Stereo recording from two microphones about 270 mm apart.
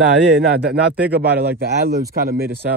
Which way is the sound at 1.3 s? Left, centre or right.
Right.